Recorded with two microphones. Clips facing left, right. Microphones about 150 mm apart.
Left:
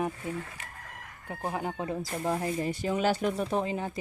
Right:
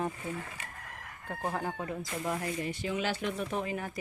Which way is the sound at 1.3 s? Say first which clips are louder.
Left 1 dB; 10° left (ahead or behind).